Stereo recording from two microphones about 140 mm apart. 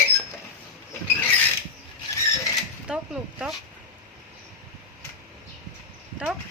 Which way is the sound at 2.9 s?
5° right (ahead or behind).